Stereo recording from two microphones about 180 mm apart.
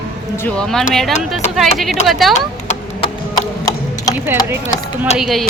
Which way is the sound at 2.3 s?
40° left (ahead or behind).